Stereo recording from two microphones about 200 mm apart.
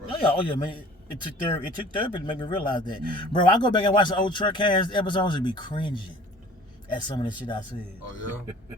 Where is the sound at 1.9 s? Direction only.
25° left (ahead or behind).